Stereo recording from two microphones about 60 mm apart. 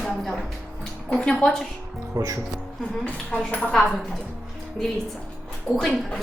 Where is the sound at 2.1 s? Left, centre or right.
Right.